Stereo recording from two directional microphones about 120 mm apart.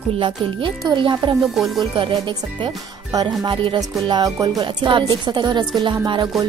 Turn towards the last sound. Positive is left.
turn(degrees=-40)  # may be behind; listen again after turning